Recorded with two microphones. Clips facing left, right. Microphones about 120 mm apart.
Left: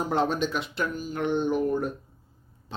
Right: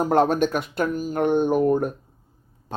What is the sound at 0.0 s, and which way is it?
Speech, 50° right (ahead or behind).